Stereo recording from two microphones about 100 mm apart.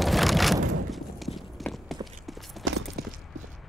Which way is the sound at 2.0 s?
Centre (ahead or behind).